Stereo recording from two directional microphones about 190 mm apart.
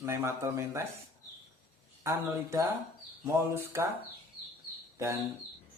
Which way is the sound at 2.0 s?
15° right (ahead or behind).